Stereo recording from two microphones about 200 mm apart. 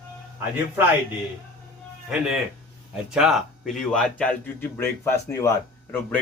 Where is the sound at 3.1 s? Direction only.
5° right (ahead or behind).